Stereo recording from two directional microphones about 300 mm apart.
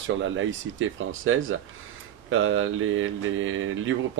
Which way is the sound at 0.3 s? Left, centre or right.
Right.